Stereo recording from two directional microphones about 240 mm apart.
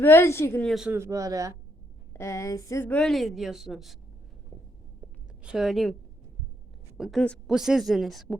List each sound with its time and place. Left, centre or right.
0.0 s a woman's voice: centre
2.1 s a woman's voice: centre
5.4 s a woman's voice: centre